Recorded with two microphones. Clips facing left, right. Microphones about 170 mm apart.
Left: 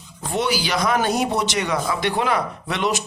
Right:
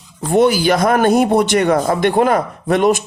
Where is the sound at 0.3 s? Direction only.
50° right (ahead or behind).